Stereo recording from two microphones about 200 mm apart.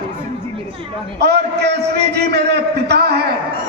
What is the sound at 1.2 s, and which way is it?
A man's voice, 55° right (ahead or behind).